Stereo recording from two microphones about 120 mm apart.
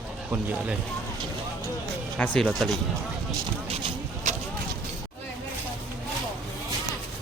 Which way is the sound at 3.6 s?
55° right (ahead or behind).